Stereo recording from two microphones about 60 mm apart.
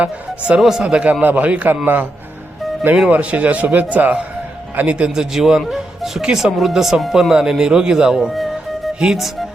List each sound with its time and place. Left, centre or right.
0.0 s speech: centre
0.6 s speech: centre
1.2 s a man's voice: right
3.1 s a man's voice: right; by 9.5 s centre